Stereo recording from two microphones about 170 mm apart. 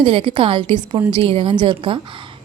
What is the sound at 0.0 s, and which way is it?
A woman's voice, 30° right (ahead or behind).